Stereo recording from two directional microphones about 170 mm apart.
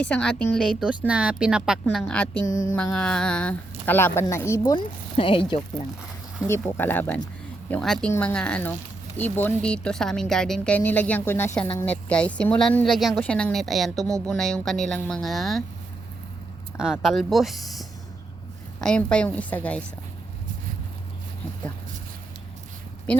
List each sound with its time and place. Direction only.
0.0 s a woman's voice: 5° left (ahead or behind)
2.5 s mantra: 20° left (ahead or behind)
2.7 s speech: 5° left (ahead or behind)
4.7 s speech: 30° left (ahead or behind)
6.6 s a woman's voice: 10° left (ahead or behind)
16.7 s a woman's voice: 5° right (ahead or behind)